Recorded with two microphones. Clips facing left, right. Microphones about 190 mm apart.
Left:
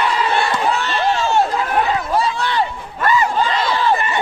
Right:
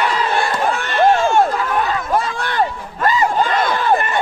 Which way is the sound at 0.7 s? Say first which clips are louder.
Right 4 dB; 50° right (ahead or behind).